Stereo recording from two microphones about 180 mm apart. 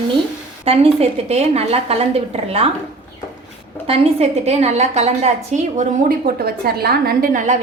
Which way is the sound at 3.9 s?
35° right (ahead or behind).